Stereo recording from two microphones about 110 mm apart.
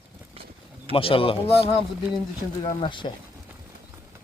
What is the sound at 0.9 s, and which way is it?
Speech, 55° left (ahead or behind).